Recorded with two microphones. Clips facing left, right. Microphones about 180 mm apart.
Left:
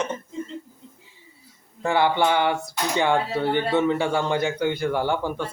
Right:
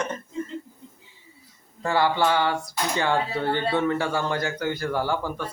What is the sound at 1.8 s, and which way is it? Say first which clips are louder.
A man's voice: left 2 dB; 20° left (ahead or behind).